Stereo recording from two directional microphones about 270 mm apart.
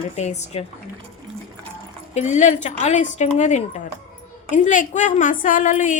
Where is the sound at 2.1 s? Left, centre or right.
Left.